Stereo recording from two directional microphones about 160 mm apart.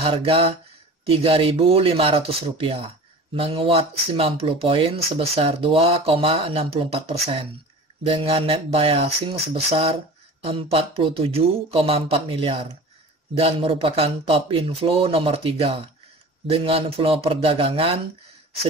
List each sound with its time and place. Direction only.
0.0 s speech: 35° right (ahead or behind)